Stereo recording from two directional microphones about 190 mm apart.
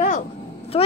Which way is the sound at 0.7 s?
30° left (ahead or behind).